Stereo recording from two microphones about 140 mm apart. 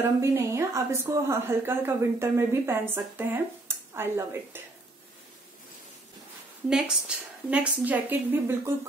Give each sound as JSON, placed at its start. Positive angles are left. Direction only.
{"t": 0.0, "sound": "a woman's voice", "side_deg": -20}
{"t": 6.7, "sound": "a woman's voice", "side_deg": -5}